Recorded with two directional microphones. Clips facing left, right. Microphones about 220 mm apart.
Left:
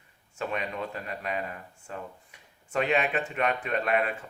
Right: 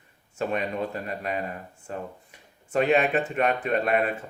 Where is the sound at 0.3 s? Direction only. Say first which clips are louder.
Right 5 dB; 40° right (ahead or behind).